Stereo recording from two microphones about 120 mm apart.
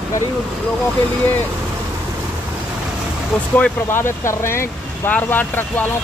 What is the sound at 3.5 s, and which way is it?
Speech, 15° left (ahead or behind).